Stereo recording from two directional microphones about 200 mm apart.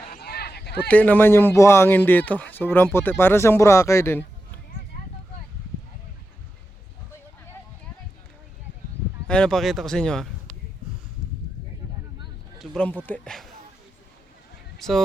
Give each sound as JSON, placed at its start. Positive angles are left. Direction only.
{"t": 0.1, "sound": "a sound", "side_deg": 50}
{"t": 0.9, "sound": "speech", "side_deg": 5}
{"t": 9.2, "sound": "speech", "side_deg": 5}
{"t": 12.5, "sound": "speech", "side_deg": 5}
{"t": 14.8, "sound": "speech", "side_deg": 0}